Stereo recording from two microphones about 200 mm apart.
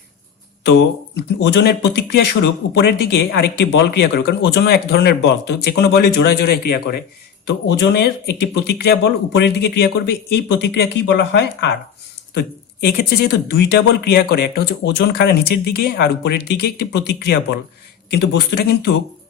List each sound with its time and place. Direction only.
0.6 s speech: 60° left (ahead or behind)
12.8 s speech: 50° left (ahead or behind)